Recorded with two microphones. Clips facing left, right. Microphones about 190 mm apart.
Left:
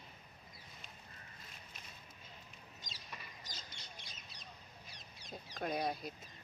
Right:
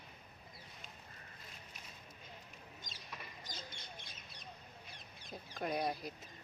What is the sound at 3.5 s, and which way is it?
Duck, 55° right (ahead or behind).